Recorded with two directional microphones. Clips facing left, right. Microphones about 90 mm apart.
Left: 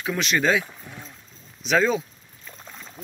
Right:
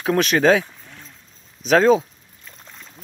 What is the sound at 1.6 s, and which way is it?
Speech, 45° right (ahead or behind).